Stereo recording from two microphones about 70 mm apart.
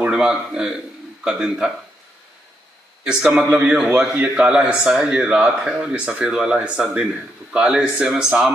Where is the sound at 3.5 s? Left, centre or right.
Right.